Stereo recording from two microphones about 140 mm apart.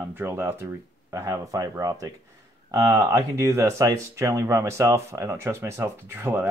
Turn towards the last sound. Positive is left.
turn(degrees=-15)  # may be behind; listen again after turning